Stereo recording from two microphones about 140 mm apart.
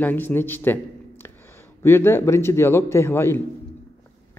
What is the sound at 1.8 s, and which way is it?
A man's voice, 15° left (ahead or behind).